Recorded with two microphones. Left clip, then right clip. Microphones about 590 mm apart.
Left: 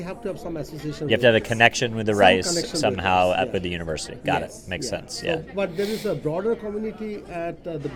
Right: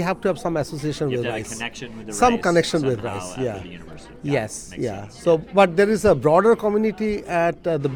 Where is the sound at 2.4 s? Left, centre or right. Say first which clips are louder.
Right 8 dB; right.